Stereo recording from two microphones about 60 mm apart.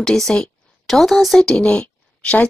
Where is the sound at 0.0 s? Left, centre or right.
Centre.